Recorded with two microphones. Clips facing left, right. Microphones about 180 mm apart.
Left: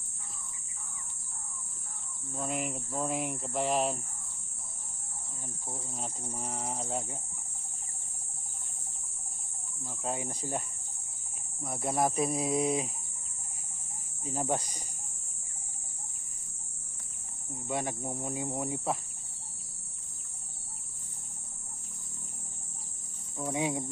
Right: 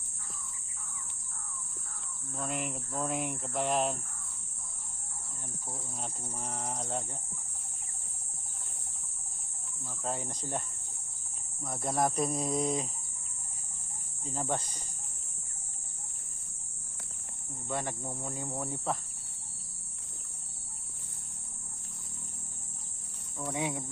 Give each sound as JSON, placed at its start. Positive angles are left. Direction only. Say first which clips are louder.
{"t": 2.3, "sound": "speech", "louder": "left 2 dB", "side_deg": 5}
{"t": 5.6, "sound": "speech", "louder": "left 2 dB", "side_deg": 5}
{"t": 10.0, "sound": "speech", "louder": "left 1 dB", "side_deg": 10}
{"t": 11.6, "sound": "speech", "louder": "left 1 dB", "side_deg": 10}
{"t": 14.3, "sound": "speech", "louder": "left 2 dB", "side_deg": 10}
{"t": 17.7, "sound": "speech", "louder": "left 2 dB", "side_deg": 15}
{"t": 23.4, "sound": "cricket", "louder": "left 3 dB", "side_deg": 20}